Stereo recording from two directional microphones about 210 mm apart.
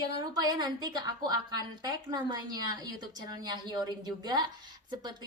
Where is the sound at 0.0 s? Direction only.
20° right (ahead or behind).